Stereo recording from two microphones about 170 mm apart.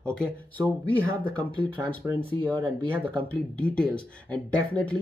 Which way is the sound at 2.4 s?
30° right (ahead or behind).